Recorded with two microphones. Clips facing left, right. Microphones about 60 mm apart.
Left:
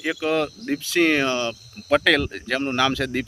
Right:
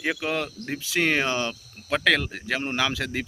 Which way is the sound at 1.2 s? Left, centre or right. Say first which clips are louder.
Left 3 dB; right.